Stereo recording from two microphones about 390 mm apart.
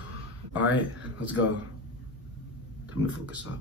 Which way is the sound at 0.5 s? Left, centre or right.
Centre.